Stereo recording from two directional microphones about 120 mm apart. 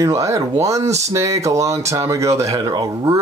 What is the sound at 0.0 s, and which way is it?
Speech, 25° right (ahead or behind).